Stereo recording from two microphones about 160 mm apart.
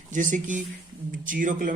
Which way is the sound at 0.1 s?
55° right (ahead or behind).